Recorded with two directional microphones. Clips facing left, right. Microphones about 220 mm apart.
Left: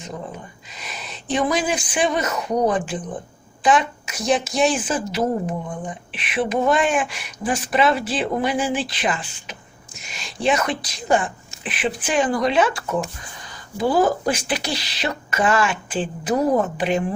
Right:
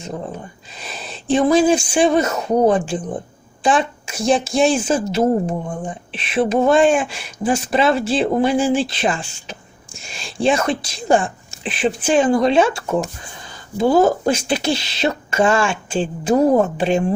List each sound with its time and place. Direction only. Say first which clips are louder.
0.0 s speech: right 4 dB; 30° right (ahead or behind)